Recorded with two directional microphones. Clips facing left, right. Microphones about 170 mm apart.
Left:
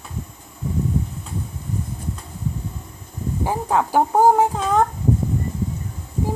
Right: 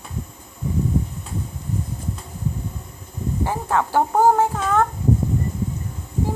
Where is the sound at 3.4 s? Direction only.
15° left (ahead or behind).